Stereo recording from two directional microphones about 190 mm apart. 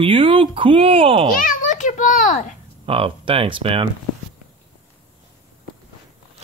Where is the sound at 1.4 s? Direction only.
45° left (ahead or behind).